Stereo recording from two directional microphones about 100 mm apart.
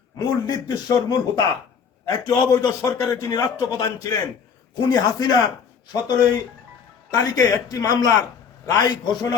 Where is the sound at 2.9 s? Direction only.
30° left (ahead or behind).